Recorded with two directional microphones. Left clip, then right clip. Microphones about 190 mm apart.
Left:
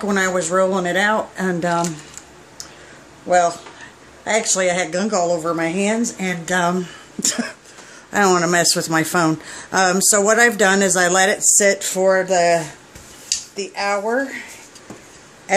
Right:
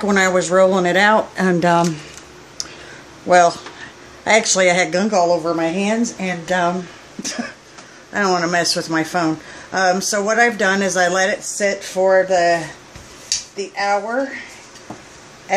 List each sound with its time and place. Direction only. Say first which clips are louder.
0.0 s speech: right 3 dB; 10° right (ahead or behind)
3.3 s speech: right 4 dB; 15° right (ahead or behind)
5.1 s speech: right 2 dB; 10° left (ahead or behind); by 6.7 s 25° left (ahead or behind)
7.2 s cough: left 4 dB; 50° left (ahead or behind)
8.1 s speech: left 2 dB; 40° left (ahead or behind)
13.6 s cough: right 2 dB; 50° left (ahead or behind)